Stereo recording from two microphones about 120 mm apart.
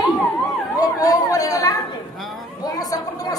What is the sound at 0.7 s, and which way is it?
Chatter, 30° left (ahead or behind).